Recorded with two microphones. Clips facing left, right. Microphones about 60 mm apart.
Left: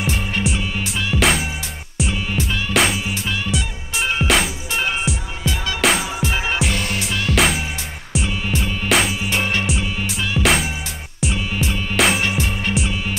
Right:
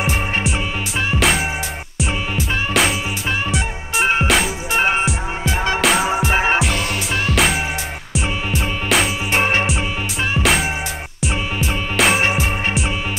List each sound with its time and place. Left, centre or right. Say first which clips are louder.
0.0 s music: right 2 dB; centre
1.1 s music: left 1 dB; centre
2.3 s music: even; centre
4.3 s music: right 2 dB; centre
6.3 s music: right 6 dB; right
7.2 s music: even; centre
9.3 s music: right 4 dB; right
10.4 s music: left 1 dB; centre